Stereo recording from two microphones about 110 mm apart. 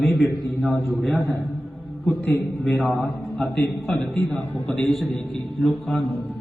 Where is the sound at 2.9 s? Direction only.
15° left (ahead or behind).